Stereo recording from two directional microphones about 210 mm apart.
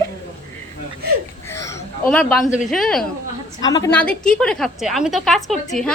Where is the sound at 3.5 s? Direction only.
20° left (ahead or behind).